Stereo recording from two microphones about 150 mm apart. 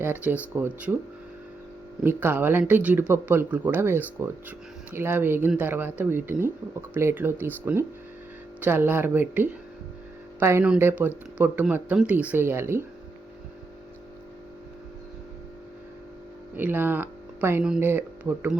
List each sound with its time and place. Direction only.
0.0 s speech: 15° right (ahead or behind)
2.0 s speech: 15° right (ahead or behind)
16.6 s speech: 15° right (ahead or behind)